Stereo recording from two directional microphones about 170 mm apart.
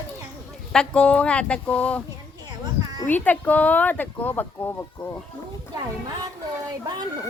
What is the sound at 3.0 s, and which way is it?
Speech, 10° left (ahead or behind).